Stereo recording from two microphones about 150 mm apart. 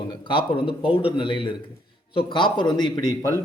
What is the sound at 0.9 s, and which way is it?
A man's voice, 35° left (ahead or behind).